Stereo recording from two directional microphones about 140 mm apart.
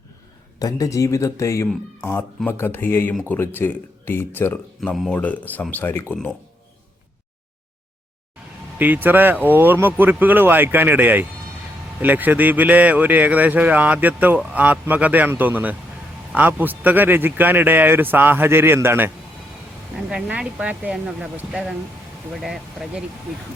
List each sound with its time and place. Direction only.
0.6 s a man's voice: 25° left (ahead or behind)
8.8 s a man's voice: 15° right (ahead or behind)
20.0 s a man's voice: 5° right (ahead or behind)